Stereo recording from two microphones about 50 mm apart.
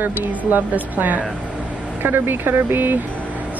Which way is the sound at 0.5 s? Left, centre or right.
Right.